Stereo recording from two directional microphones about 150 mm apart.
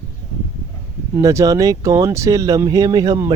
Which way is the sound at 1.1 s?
20° right (ahead or behind).